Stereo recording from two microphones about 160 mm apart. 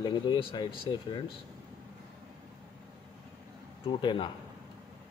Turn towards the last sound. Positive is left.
turn(degrees=30)  # may be behind; listen again after turning